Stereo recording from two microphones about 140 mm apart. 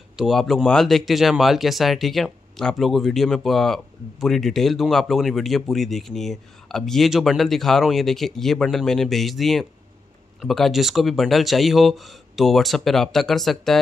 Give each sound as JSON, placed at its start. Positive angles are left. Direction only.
{"t": 0.1, "sound": "speech", "side_deg": 0}